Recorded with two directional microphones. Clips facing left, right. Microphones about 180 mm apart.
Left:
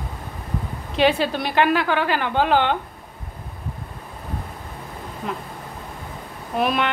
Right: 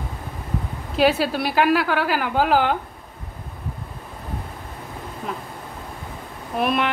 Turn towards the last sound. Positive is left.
turn(degrees=0)  # may be behind; listen again after turning